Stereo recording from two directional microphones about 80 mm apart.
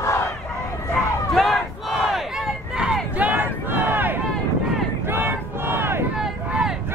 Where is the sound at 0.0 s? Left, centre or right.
Left.